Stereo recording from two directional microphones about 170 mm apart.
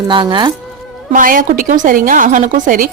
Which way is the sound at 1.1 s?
55° right (ahead or behind).